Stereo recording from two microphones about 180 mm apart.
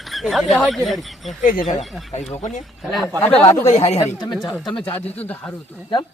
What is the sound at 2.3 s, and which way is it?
Speech, 40° left (ahead or behind).